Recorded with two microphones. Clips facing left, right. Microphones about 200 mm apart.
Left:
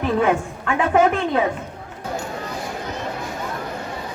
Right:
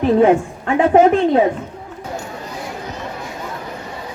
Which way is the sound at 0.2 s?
30° right (ahead or behind).